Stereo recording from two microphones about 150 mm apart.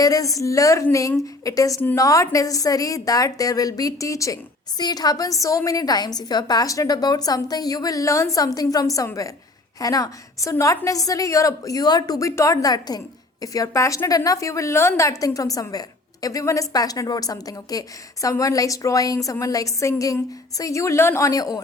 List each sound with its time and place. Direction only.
0.0 s a woman's voice: 25° left (ahead or behind)